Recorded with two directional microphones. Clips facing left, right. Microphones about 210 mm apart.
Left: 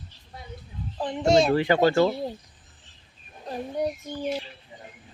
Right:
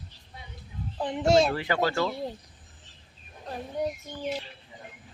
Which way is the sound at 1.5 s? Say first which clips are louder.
Left 7 dB; 25° left (ahead or behind).